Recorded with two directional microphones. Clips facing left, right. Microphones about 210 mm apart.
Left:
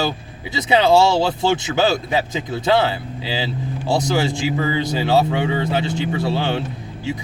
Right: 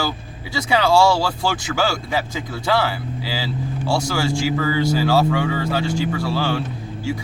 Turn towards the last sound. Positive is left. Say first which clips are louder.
# right 1 dB
turn(degrees=20)  # may be behind; listen again after turning